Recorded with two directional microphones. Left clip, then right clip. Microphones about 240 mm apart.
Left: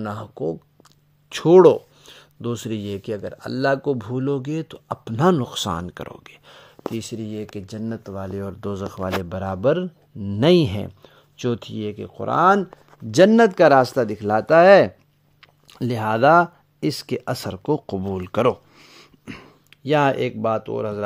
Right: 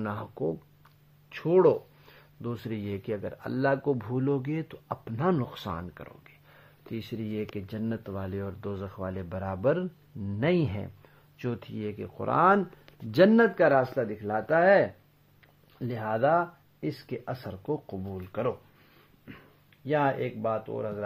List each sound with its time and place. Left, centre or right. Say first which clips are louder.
0.0 s speech: left 5 dB; left
1.3 s speech: left 10 dB; left
10.4 s speech: left 11 dB; left
13.6 s speech: left 9 dB; left